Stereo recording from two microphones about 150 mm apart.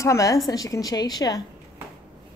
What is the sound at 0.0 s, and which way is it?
A woman's voice, 20° left (ahead or behind).